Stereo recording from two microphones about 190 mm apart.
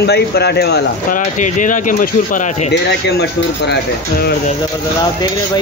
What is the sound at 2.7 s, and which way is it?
Speech, 60° left (ahead or behind).